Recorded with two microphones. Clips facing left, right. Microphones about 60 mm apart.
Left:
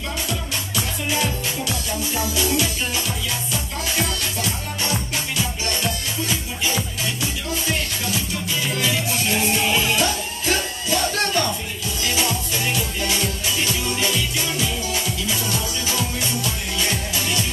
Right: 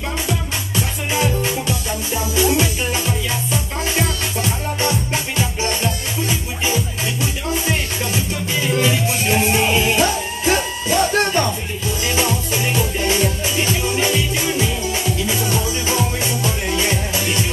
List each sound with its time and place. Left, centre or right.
1.1 s music: right
3.9 s music: right
8.7 s music: right